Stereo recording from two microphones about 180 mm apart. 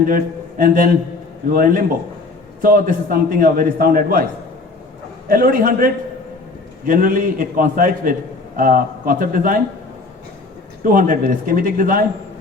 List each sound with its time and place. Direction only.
0.1 s a man's voice: 50° right (ahead or behind)
5.3 s a man's voice: 50° right (ahead or behind)
10.8 s a man's voice: 50° right (ahead or behind)